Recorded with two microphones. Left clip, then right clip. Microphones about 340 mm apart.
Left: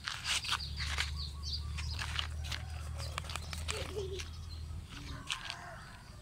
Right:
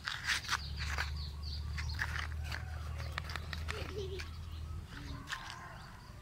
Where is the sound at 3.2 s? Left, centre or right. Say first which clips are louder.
Even; centre.